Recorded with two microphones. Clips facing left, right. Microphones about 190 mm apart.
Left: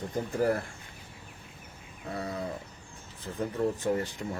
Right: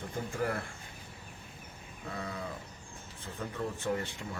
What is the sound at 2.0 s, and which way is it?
Speech, 35° left (ahead or behind).